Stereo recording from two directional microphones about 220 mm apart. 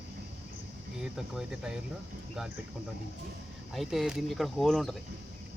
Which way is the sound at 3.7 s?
Centre (ahead or behind).